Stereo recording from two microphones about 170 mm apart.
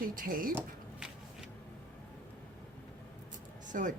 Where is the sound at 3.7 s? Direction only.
50° right (ahead or behind).